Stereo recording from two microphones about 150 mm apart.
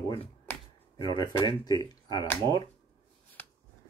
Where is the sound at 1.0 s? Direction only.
30° left (ahead or behind).